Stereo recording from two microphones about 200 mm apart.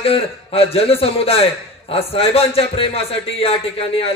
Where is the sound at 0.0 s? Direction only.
30° left (ahead or behind).